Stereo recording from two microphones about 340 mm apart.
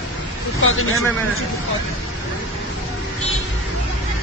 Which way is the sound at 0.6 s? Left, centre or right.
Left.